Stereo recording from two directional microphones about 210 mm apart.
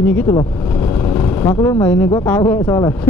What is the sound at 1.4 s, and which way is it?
Speech, 15° left (ahead or behind).